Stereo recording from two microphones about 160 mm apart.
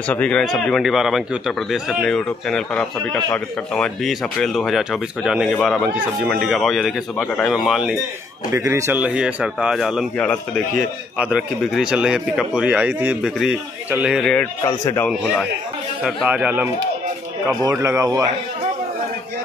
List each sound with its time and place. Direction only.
0.1 s a man's voice: 5° left (ahead or behind)
8.5 s a man's voice: 15° right (ahead or behind); by 14.5 s 5° left (ahead or behind)
16.0 s speech: centre (ahead or behind)
17.6 s speech: 20° right (ahead or behind)